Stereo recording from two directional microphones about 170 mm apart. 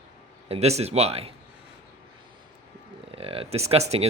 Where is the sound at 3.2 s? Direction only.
35° right (ahead or behind).